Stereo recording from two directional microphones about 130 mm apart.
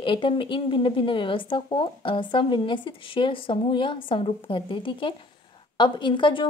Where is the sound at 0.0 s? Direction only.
40° left (ahead or behind).